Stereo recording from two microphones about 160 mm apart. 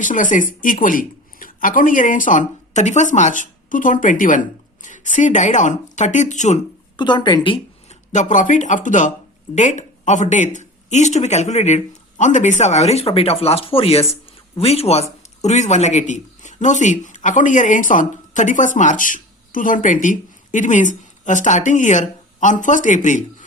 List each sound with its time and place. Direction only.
0.0 s speech: 55° left (ahead or behind)
6.9 s a woman's voice: 30° left (ahead or behind)
7.9 s speech: 50° left (ahead or behind)